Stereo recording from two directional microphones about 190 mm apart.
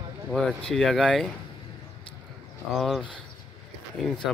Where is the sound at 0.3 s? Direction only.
Centre (ahead or behind).